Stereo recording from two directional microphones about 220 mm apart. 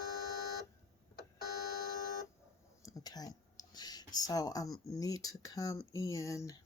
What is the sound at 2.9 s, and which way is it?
Speech, 15° left (ahead or behind).